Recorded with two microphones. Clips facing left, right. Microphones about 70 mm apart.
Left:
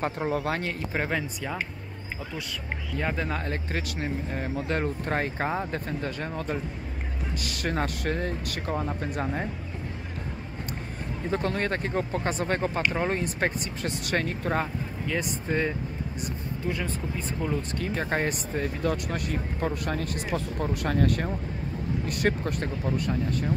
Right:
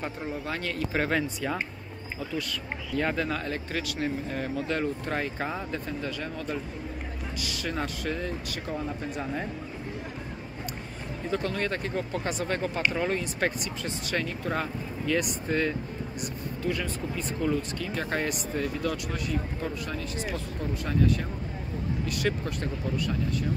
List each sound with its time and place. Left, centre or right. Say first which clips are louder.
0.0 s speech: left 6 dB; left
0.5 s speech: left 3 dB; left
0.9 s speech: right 2 dB; centre
3.4 s speech: even; left
11.2 s speech: left 2 dB; left
15.0 s speech: right 2 dB; left
17.6 s speech: left 2 dB; left
19.1 s speech: left 1 dB; left
22.0 s speech: left 3 dB; left